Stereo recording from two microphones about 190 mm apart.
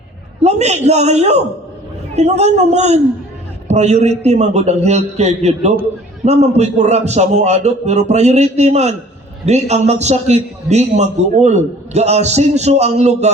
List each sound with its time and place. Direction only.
0.4 s a man's voice: 35° right (ahead or behind)